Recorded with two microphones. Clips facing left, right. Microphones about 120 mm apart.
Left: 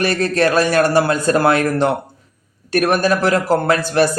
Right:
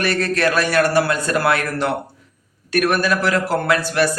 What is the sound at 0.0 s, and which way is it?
Speech, 30° left (ahead or behind).